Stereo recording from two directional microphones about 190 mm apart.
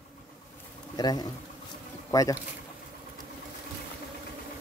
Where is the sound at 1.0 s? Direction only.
20° left (ahead or behind).